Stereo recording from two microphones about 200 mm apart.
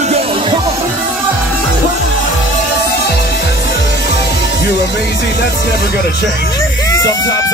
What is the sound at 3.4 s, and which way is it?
Music, 60° left (ahead or behind).